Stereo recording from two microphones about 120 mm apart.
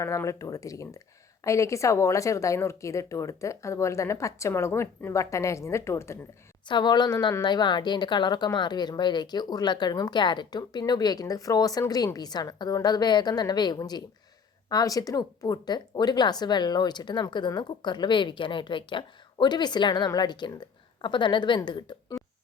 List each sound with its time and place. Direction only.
0.0 s speech: 25° left (ahead or behind)
6.7 s speech: 40° left (ahead or behind)
22.2 s a sound: centre (ahead or behind)